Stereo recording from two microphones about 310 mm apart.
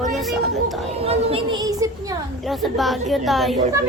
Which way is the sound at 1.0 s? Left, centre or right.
Centre.